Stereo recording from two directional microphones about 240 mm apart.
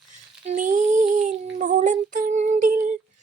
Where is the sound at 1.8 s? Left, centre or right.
Right.